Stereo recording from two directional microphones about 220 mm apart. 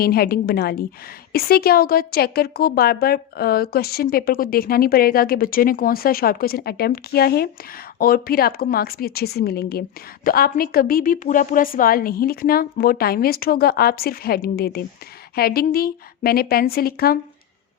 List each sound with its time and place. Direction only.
0.0 s a woman's voice: 45° left (ahead or behind)